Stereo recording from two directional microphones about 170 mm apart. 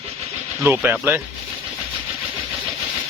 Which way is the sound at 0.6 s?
10° right (ahead or behind).